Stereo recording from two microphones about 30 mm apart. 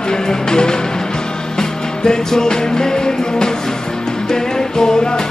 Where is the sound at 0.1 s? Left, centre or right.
Left.